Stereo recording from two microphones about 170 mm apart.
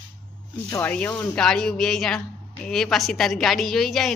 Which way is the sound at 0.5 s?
10° left (ahead or behind).